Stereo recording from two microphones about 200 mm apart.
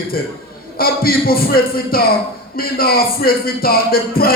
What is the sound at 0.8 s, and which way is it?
Music, 50° left (ahead or behind).